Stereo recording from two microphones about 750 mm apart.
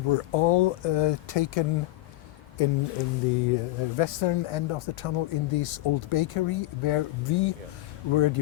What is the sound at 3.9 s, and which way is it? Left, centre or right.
Speech, left.